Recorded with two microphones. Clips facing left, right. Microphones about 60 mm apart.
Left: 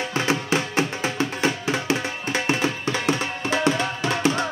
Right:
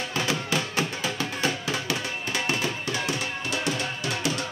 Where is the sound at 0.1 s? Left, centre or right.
Left.